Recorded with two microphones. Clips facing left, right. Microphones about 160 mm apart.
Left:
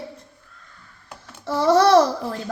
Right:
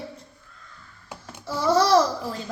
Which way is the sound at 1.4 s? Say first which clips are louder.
Left 4 dB; 65° left (ahead or behind).